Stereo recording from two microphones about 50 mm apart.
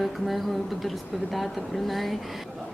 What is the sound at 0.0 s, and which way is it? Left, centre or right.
Speech, centre.